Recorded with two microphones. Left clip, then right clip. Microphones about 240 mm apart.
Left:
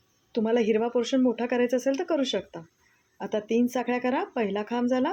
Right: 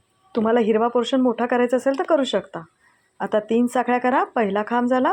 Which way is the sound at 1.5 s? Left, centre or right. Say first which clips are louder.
Right 6 dB; right.